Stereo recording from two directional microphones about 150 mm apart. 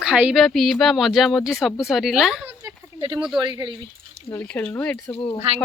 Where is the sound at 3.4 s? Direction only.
30° right (ahead or behind).